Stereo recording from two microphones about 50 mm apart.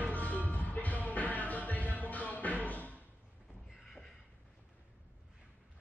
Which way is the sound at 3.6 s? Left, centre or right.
Centre.